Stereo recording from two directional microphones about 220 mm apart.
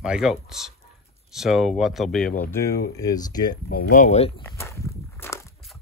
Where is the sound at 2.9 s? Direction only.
15° left (ahead or behind).